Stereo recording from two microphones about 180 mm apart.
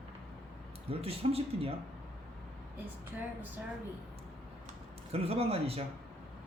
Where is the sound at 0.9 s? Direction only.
30° right (ahead or behind).